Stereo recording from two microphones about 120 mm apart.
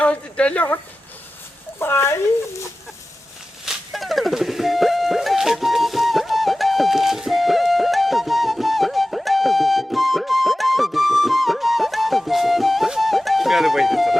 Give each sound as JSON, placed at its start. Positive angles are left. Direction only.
{"t": 0.0, "sound": "speech", "side_deg": 10}
{"t": 1.8, "sound": "speech", "side_deg": 20}
{"t": 3.7, "sound": "music", "side_deg": 0}